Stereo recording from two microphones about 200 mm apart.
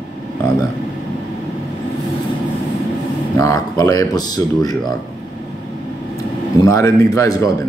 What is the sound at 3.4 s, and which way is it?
Speech, 15° left (ahead or behind).